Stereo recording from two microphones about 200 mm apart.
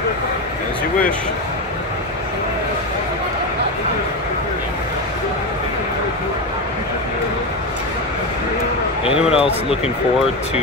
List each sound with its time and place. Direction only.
9.0 s a man's voice: 30° left (ahead or behind)